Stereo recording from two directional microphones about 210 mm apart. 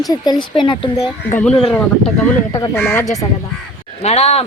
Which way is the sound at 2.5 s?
15° left (ahead or behind).